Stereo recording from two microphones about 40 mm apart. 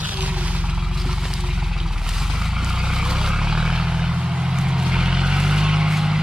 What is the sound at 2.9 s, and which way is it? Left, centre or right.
Vehicle, centre.